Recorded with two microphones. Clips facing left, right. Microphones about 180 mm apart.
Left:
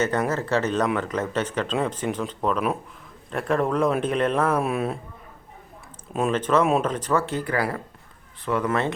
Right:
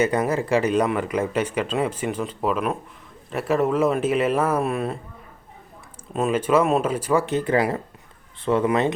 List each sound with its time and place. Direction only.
0.0 s speech: 10° right (ahead or behind)
6.1 s speech: 5° right (ahead or behind)